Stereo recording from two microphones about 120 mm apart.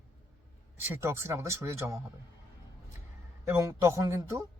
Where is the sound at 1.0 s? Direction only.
20° right (ahead or behind).